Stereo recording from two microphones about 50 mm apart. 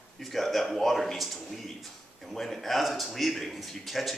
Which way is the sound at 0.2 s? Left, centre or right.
Centre.